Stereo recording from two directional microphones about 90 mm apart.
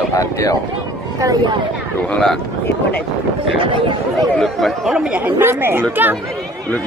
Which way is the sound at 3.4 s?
80° right.